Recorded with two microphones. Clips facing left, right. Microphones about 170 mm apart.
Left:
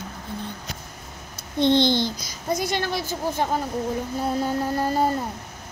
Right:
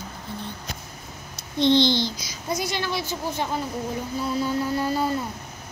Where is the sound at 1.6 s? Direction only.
50° left (ahead or behind).